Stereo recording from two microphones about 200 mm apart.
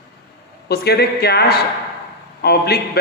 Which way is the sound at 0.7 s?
55° left (ahead or behind).